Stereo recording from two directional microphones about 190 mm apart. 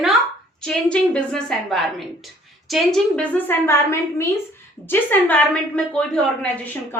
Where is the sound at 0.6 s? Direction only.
5° left (ahead or behind).